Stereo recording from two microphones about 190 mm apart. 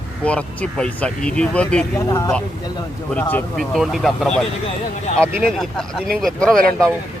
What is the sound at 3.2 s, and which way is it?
Speech, 10° left (ahead or behind).